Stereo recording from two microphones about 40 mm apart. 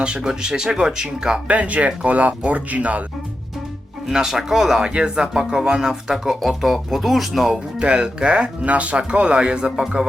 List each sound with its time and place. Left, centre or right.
0.2 s speech: centre
1.5 s speech: right
4.3 s speech: centre
7.8 s speech: right